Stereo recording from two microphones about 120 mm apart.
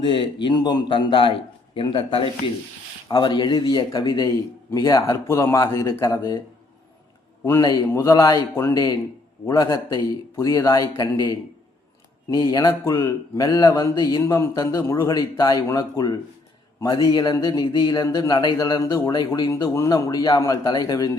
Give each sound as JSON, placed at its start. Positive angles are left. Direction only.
{"t": 0.0, "sound": "a man's voice", "side_deg": 40}
{"t": 7.6, "sound": "speech", "side_deg": 35}
{"t": 12.8, "sound": "a man's voice", "side_deg": 20}
{"t": 13.4, "sound": "speech", "side_deg": 35}
{"t": 14.2, "sound": "a man's voice", "side_deg": 25}